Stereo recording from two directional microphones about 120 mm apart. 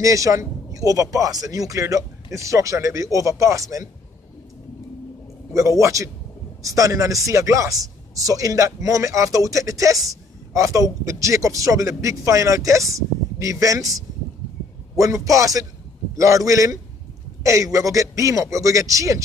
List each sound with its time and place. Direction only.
0.0 s speech: 25° right (ahead or behind)
5.5 s speech: 25° right (ahead or behind)